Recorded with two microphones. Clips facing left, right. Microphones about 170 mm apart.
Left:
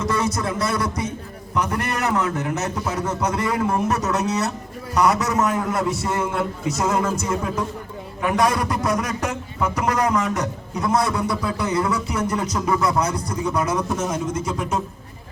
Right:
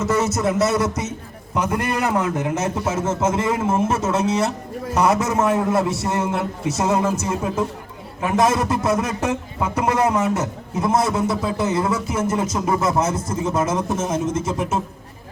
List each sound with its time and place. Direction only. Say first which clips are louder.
0.0 s a man's voice: right 3 dB; 20° right (ahead or behind)